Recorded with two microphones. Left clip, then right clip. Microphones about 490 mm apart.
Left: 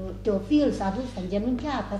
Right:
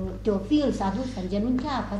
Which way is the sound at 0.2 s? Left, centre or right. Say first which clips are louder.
Left 1 dB; left.